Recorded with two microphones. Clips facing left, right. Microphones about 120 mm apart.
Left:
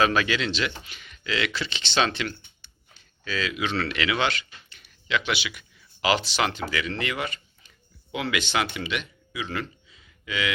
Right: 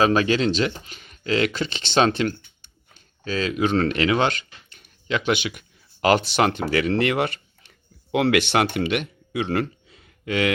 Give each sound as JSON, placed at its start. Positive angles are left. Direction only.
{"t": 0.0, "sound": "speech", "side_deg": -35}